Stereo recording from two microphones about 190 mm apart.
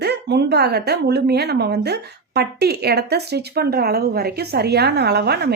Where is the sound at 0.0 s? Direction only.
60° right (ahead or behind).